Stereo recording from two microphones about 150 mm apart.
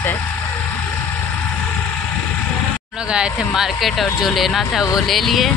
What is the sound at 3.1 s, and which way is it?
Speech, 5° right (ahead or behind).